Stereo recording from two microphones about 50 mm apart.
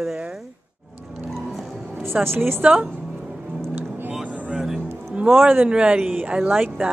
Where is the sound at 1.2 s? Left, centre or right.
Centre.